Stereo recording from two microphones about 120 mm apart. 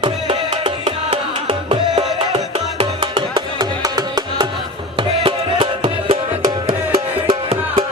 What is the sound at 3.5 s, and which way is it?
Music, 35° right (ahead or behind).